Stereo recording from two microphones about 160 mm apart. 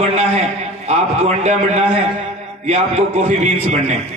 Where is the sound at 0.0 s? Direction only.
40° right (ahead or behind).